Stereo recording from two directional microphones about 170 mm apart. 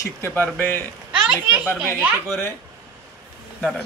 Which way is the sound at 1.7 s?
10° right (ahead or behind).